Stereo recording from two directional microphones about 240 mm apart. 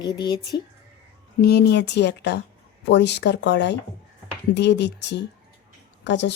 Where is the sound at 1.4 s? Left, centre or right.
Left.